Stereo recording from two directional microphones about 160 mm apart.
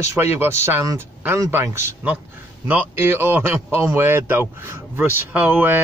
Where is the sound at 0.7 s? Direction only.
15° right (ahead or behind).